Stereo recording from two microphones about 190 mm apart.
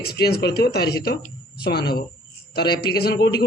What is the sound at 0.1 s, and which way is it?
A man's voice, 55° left (ahead or behind).